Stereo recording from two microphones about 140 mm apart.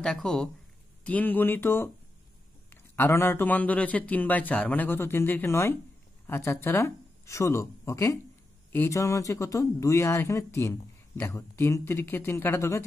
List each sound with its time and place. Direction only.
0.0 s a man's voice: 5° left (ahead or behind)